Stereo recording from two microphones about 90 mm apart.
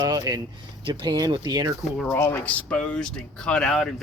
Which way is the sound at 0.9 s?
55° right (ahead or behind).